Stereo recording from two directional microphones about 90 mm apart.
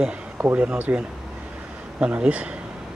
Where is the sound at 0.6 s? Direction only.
15° right (ahead or behind).